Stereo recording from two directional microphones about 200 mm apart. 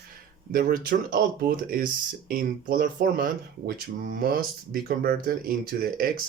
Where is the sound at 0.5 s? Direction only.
45° right (ahead or behind).